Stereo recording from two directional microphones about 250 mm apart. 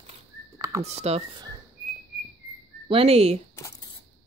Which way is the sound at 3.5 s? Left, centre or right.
Centre.